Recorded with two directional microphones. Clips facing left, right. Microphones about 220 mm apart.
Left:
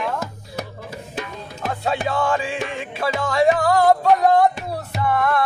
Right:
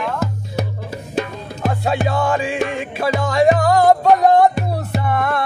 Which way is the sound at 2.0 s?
15° right (ahead or behind).